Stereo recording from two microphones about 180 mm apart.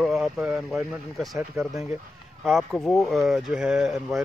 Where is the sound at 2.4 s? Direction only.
Centre (ahead or behind).